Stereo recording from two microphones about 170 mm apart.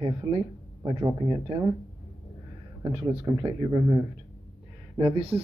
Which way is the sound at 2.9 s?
25° right (ahead or behind).